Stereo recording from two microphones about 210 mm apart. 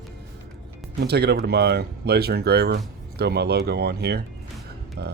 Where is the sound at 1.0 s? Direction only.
50° right (ahead or behind).